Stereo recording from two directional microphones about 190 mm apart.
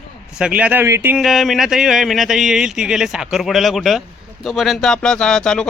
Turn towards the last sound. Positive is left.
turn(degrees=5)  # may be behind; listen again after turning